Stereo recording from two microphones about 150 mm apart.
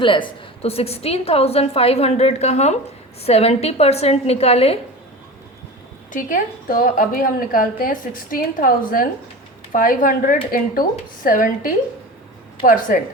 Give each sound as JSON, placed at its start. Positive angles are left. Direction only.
{"t": 0.0, "sound": "a woman's voice", "side_deg": 35}
{"t": 6.1, "sound": "a woman's voice", "side_deg": 60}